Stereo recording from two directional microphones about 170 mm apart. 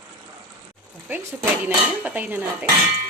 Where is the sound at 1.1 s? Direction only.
15° right (ahead or behind).